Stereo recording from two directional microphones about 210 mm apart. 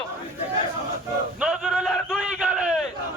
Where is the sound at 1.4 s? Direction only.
Centre (ahead or behind).